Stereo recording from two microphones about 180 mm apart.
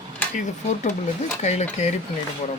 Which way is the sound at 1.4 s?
40° left (ahead or behind).